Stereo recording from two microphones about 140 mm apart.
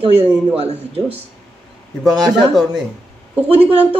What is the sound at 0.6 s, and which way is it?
Speech, 45° right (ahead or behind).